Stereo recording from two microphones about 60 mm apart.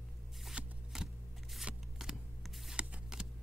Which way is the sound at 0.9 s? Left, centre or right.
Centre.